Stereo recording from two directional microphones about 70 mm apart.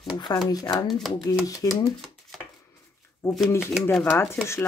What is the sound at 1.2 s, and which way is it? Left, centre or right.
Speech, left.